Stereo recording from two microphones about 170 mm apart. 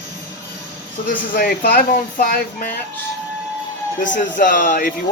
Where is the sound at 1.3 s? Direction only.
60° left (ahead or behind).